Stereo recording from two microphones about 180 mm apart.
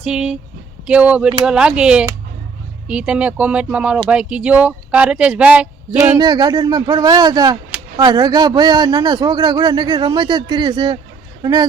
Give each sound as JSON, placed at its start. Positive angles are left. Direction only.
{"t": 0.0, "sound": "speech", "side_deg": -5}
{"t": 6.1, "sound": "speech", "side_deg": -20}